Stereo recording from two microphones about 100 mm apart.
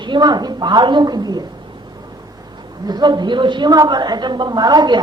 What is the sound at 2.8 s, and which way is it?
A woman's voice, 45° right (ahead or behind).